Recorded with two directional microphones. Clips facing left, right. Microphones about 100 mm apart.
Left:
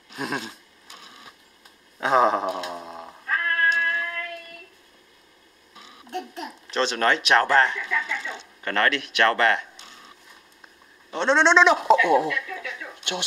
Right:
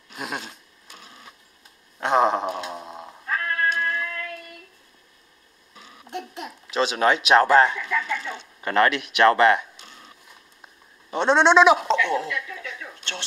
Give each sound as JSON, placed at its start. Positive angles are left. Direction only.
{"t": 0.1, "sound": "a sound", "side_deg": 0}
{"t": 2.0, "sound": "cat", "side_deg": 0}
{"t": 6.0, "sound": "a child's voice", "side_deg": -15}
{"t": 11.1, "sound": "a child's voice", "side_deg": -15}
{"t": 11.8, "sound": "speech", "side_deg": 10}